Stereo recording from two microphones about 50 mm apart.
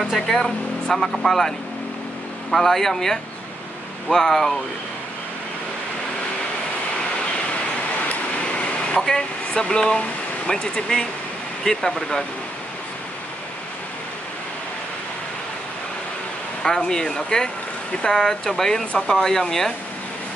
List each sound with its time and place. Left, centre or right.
0.1 s speech: centre
2.5 s speech: centre
8.1 s vehicle: left
9.5 s speech: centre
16.6 s speech: centre
18.9 s speech: left